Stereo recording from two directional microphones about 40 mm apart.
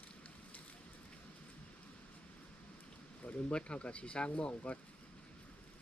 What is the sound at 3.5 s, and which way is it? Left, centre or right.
Speech, left.